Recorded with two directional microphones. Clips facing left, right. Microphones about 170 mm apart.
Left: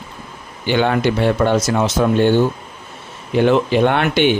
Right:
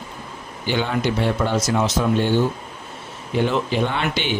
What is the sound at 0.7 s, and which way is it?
Speech, 70° left (ahead or behind).